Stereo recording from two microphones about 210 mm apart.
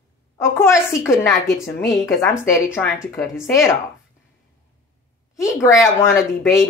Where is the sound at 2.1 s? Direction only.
Centre (ahead or behind).